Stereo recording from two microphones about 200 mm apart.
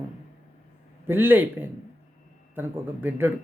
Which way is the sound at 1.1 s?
10° right (ahead or behind).